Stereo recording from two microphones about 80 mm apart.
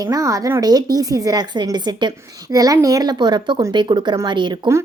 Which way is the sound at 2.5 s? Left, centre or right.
Right.